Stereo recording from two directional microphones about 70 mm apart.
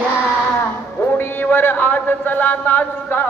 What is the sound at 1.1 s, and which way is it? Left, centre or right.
A man's voice, left.